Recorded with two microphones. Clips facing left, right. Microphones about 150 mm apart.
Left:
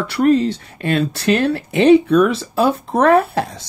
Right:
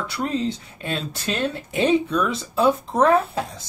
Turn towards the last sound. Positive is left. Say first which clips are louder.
# left 7 dB
turn(degrees=75)  # may be behind; listen again after turning